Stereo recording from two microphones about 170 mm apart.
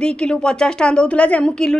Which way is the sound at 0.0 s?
5° left (ahead or behind).